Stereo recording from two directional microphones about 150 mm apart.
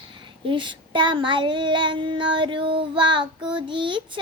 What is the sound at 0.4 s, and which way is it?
Child singing, 35° right (ahead or behind).